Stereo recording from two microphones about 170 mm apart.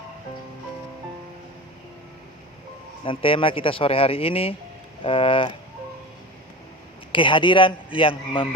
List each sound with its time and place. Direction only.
3.0 s speech: 30° left (ahead or behind)
7.1 s a man's voice: 30° left (ahead or behind)